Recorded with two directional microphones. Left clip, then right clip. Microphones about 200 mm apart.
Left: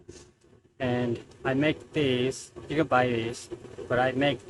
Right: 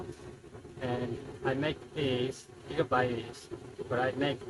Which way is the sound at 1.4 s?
40° left (ahead or behind).